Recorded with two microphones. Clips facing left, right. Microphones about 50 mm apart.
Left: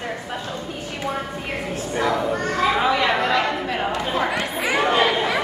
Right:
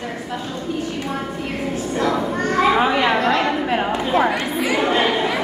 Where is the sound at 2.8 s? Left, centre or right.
Right.